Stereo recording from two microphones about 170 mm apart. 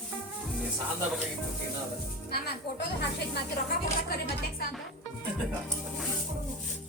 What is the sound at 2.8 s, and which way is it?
Speech, 80° left.